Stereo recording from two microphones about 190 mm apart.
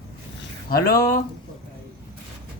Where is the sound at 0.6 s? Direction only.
50° left (ahead or behind).